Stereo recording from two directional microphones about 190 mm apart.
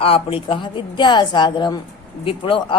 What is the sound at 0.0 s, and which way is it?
A woman's voice, 30° left (ahead or behind).